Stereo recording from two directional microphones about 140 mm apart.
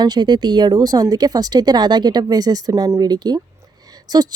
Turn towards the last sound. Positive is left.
turn(degrees=-25)  # may be behind; listen again after turning